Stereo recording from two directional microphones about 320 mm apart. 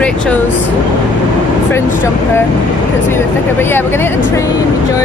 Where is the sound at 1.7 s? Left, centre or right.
Centre.